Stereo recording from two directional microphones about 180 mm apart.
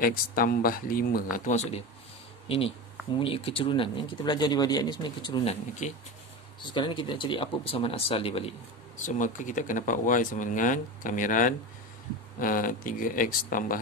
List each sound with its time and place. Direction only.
0.0 s speech: 50° left (ahead or behind); by 8.5 s 30° left (ahead or behind)
8.9 s speech: 45° left (ahead or behind)